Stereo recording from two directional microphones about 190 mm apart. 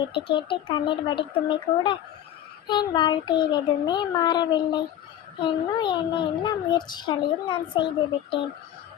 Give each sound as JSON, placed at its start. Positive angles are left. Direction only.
{"t": 0.1, "sound": "a child's voice", "side_deg": 25}